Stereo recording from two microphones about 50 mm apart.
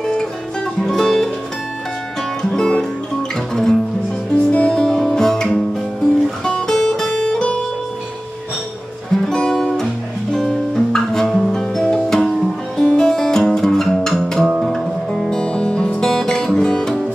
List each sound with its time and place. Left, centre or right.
0.0 s music: centre
2.7 s guitar: centre
4.3 s music: left
4.7 s guitar: centre
9.1 s music: centre
14.4 s music: centre
14.7 s music: centre